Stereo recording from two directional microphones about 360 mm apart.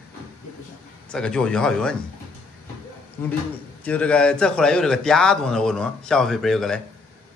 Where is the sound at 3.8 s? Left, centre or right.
Centre.